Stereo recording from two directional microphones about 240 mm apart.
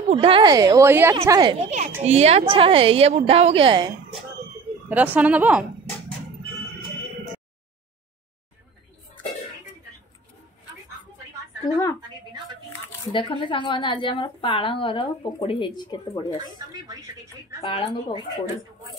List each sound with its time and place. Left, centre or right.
0.1 s a woman's voice: right
4.8 s speech: centre
11.6 s a woman's voice: centre
13.1 s a woman's voice: left
16.3 s speech: centre
17.6 s a woman's voice: left